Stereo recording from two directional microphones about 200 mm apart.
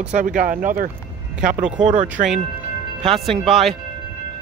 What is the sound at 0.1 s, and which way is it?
Speech, 40° right (ahead or behind).